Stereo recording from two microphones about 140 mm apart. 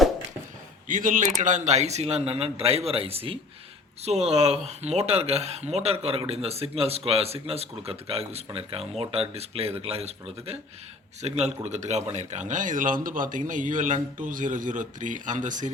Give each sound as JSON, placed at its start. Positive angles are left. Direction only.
{"t": 0.9, "sound": "speech", "side_deg": -70}